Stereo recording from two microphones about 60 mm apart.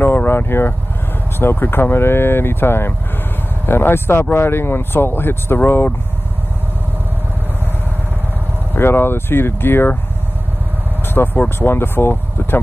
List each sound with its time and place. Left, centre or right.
0.0 s speech: left
8.7 s speech: left
11.3 s speech: left